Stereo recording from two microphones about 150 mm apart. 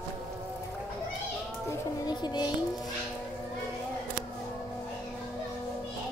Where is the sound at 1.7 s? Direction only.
30° left (ahead or behind).